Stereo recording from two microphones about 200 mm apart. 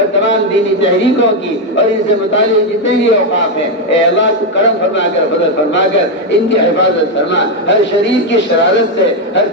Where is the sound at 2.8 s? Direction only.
65° left (ahead or behind).